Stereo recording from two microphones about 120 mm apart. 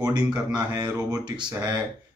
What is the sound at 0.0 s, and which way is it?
Speech, 35° right (ahead or behind).